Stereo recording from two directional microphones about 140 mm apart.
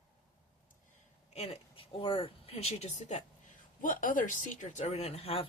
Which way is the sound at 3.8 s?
75° left (ahead or behind).